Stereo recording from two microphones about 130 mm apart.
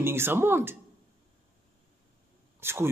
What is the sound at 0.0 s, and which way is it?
Speech, 20° right (ahead or behind).